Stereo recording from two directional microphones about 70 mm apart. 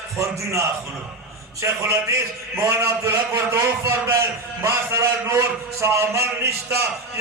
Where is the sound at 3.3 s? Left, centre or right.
Right.